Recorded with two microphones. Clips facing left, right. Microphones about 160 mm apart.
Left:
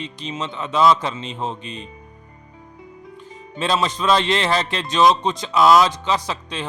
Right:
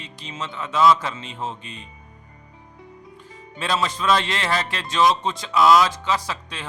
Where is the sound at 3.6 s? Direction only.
20° left (ahead or behind).